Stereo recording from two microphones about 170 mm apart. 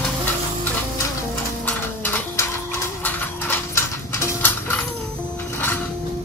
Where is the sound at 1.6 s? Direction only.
10° left (ahead or behind).